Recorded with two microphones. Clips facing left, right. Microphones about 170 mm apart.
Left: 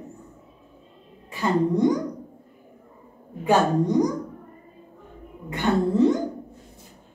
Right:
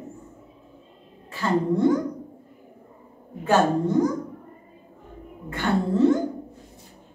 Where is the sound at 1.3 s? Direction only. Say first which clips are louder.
Left 1 dB; 15° left (ahead or behind).